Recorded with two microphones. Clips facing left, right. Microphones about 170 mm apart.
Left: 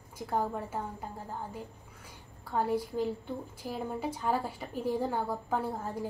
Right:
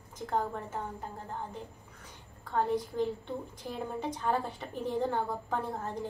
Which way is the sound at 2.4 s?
10° left (ahead or behind).